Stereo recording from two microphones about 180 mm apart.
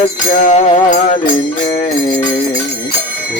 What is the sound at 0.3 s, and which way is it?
Music, 45° left (ahead or behind).